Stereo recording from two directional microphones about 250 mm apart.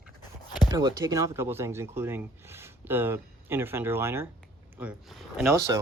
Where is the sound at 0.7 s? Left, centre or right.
Centre.